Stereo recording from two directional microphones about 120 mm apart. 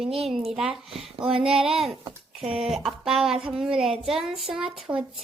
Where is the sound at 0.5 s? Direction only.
5° right (ahead or behind).